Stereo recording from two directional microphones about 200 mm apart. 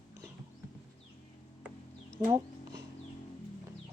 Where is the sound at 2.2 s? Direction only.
20° right (ahead or behind).